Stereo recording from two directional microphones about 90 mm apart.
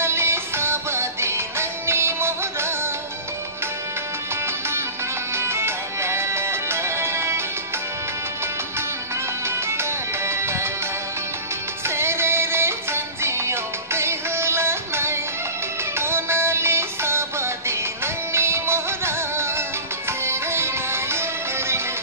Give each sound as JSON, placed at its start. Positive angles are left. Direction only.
{"t": 0.0, "sound": "music", "side_deg": -30}
{"t": 5.3, "sound": "music", "side_deg": -30}
{"t": 9.7, "sound": "music", "side_deg": -30}
{"t": 11.9, "sound": "music", "side_deg": -30}